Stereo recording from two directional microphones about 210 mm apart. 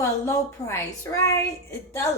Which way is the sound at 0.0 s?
15° left (ahead or behind).